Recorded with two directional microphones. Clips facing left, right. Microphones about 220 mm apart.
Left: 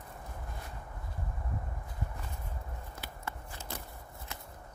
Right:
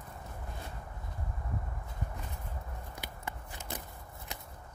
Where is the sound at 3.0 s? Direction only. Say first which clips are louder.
Left 1 dB; 15° right (ahead or behind).